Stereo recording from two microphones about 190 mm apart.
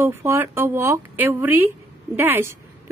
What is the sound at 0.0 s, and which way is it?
Speech, 15° right (ahead or behind).